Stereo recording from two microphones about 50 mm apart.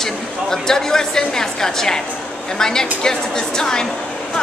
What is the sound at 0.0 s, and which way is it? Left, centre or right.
A woman's voice, centre.